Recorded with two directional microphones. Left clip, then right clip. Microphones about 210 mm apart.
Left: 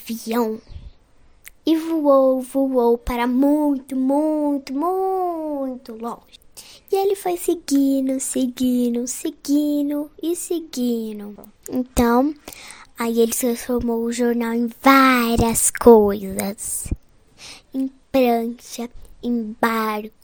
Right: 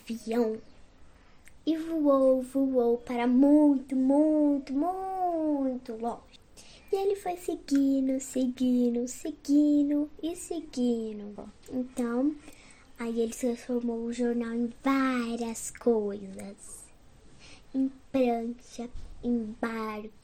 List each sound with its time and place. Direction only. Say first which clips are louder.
0.0 s a woman's voice: left 7 dB; 50° left (ahead or behind)
17.4 s a sound: left 14 dB; 50° left (ahead or behind)
18.1 s a woman's voice: left 11 dB; 50° left (ahead or behind)